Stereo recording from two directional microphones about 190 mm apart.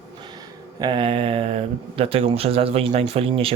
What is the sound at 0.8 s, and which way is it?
Speech, 25° right (ahead or behind).